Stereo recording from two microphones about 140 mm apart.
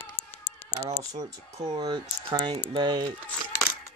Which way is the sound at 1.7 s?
30° right (ahead or behind).